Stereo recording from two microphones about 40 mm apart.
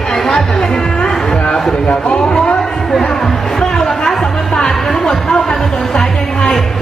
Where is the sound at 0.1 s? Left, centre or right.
Centre.